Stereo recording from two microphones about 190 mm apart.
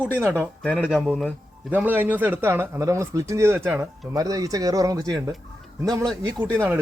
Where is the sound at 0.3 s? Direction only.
10° left (ahead or behind).